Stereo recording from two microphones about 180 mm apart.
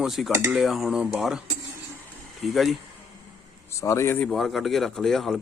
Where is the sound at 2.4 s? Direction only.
Centre (ahead or behind).